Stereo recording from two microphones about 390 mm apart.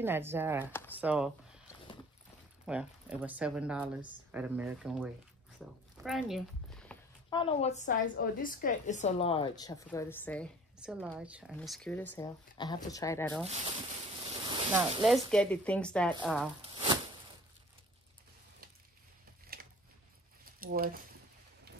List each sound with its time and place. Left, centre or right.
0.0 s speech: centre
2.6 s speech: centre
14.5 s speech: centre
16.6 s a sound: centre
19.5 s a sound: right
20.5 s speech: right